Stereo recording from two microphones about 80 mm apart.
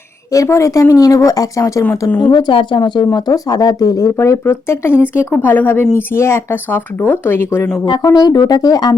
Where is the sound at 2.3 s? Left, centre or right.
Left.